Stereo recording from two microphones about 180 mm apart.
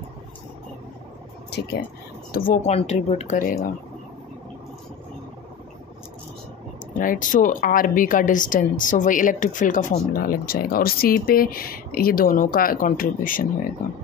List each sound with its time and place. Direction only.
1.5 s speech: 65° left (ahead or behind)
2.3 s speech: 50° left (ahead or behind)
7.0 s speech: 50° left (ahead or behind)